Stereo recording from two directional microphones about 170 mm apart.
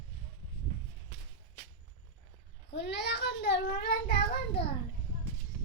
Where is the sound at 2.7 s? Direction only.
90° left; by 4.1 s 65° left (ahead or behind).